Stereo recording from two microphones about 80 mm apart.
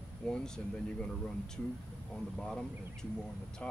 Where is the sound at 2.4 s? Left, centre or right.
Centre.